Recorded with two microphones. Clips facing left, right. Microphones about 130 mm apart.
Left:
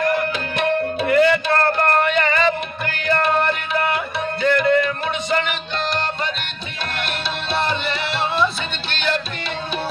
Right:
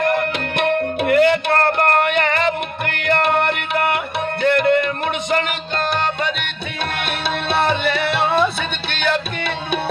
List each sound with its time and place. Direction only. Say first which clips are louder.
0.0 s music: right 1 dB; 55° right (ahead or behind)
7.0 s music: right 3 dB; 60° right (ahead or behind)